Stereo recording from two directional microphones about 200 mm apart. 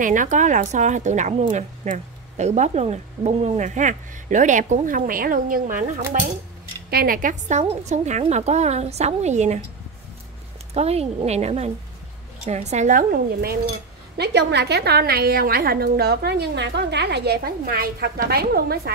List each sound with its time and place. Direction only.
0.0 s speech: 40° right (ahead or behind)
10.7 s a woman's voice: 30° right (ahead or behind); by 18.8 s 50° right (ahead or behind)